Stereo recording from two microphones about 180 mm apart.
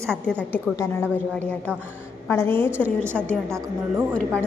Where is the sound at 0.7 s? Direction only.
15° left (ahead or behind).